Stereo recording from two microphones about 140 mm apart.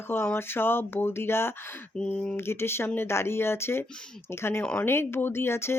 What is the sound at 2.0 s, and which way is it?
Speech, 5° left (ahead or behind).